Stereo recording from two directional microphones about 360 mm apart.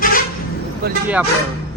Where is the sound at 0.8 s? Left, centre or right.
Right.